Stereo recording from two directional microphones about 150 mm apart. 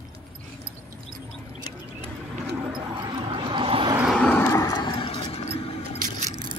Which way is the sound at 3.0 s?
30° right (ahead or behind).